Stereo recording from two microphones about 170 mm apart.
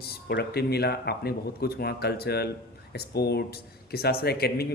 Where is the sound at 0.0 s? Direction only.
70° left (ahead or behind).